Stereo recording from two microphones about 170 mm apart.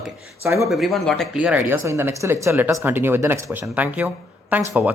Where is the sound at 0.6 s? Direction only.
Centre (ahead or behind).